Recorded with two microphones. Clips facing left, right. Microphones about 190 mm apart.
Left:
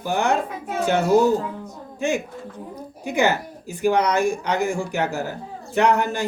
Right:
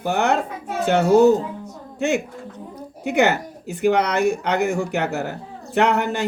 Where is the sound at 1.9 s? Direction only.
65° right (ahead or behind).